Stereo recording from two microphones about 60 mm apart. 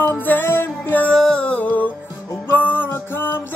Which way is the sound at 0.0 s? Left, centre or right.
Left.